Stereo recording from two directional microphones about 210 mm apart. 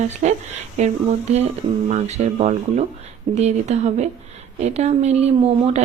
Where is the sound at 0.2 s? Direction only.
35° right (ahead or behind).